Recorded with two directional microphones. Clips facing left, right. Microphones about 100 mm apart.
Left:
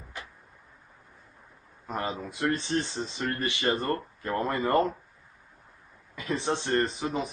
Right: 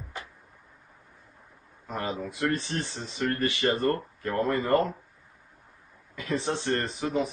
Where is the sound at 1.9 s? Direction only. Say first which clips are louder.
Even; 20° left (ahead or behind).